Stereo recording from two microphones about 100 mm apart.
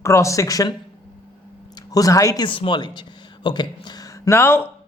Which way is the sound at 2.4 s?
60° left (ahead or behind).